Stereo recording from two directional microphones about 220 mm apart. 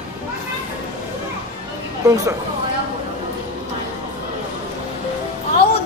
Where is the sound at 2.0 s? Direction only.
15° right (ahead or behind).